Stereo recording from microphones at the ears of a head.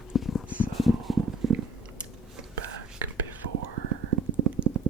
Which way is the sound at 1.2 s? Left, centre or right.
Right.